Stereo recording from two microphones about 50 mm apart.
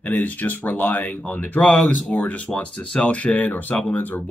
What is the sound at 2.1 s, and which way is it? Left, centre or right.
Speech, left.